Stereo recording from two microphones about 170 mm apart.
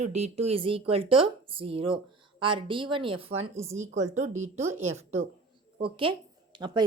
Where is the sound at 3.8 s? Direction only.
45° right (ahead or behind); by 6.8 s 25° right (ahead or behind).